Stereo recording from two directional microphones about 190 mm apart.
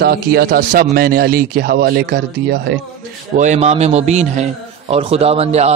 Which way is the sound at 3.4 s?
35° right (ahead or behind).